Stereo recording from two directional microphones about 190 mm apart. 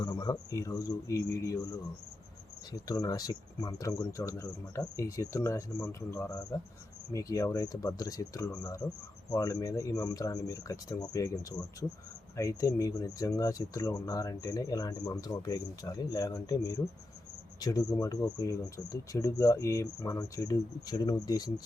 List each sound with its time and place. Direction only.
0.0 s speech: 20° left (ahead or behind)
2.7 s speech: 20° left (ahead or behind)